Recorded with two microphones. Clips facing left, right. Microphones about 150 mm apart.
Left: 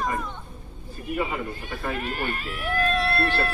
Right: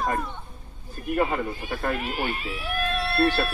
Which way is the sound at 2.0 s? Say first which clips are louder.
Right 1 dB; 10° right (ahead or behind).